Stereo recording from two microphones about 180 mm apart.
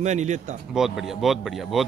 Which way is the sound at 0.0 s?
40° right (ahead or behind).